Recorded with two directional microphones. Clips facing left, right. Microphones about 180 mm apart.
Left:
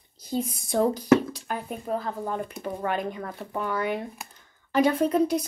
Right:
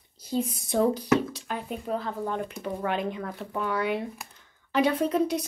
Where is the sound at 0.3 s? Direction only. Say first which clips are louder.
Even; centre (ahead or behind).